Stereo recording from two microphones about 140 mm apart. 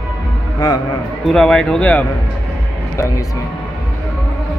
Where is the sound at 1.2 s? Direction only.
5° left (ahead or behind).